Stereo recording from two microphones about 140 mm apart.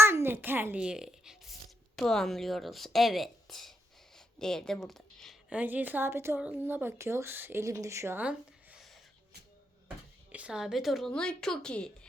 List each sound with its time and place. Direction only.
0.0 s a sound: 15° right (ahead or behind)
2.0 s a woman's voice: centre (ahead or behind)
5.5 s speech: 10° right (ahead or behind)
10.3 s a woman's voice: 5° right (ahead or behind)